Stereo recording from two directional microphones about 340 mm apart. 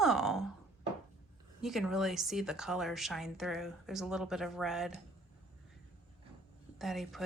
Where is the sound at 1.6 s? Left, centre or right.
Centre.